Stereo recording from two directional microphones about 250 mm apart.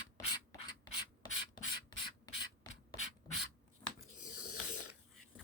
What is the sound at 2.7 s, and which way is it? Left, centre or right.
Beatboxing, centre.